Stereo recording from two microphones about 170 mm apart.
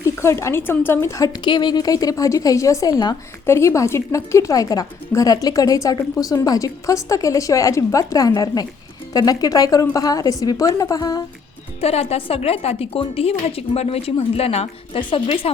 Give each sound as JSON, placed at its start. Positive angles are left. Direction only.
{"t": 0.0, "sound": "speech", "side_deg": 15}
{"t": 11.8, "sound": "a woman's voice", "side_deg": 35}